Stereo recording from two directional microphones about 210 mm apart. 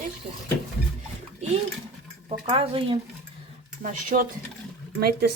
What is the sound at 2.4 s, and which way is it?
Speech, 25° right (ahead or behind).